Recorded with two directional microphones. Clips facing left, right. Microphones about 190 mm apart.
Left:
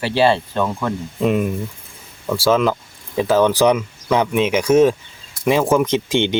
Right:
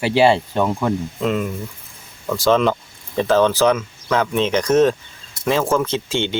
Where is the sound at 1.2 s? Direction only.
15° left (ahead or behind).